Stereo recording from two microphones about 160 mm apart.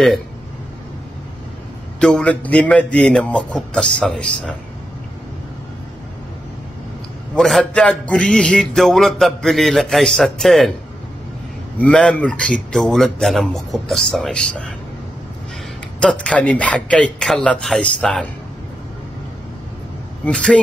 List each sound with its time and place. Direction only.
2.0 s speech: 5° left (ahead or behind)
7.3 s a man's voice: 5° left (ahead or behind)
11.8 s a man's voice: 5° left (ahead or behind)
16.0 s speech: 5° left (ahead or behind)
20.2 s speech: 5° left (ahead or behind)